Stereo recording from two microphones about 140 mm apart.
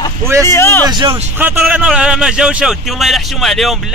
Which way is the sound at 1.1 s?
15° right (ahead or behind).